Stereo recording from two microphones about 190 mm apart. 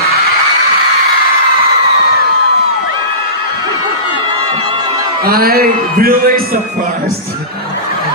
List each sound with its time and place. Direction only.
5.2 s a man's voice: 50° right (ahead or behind)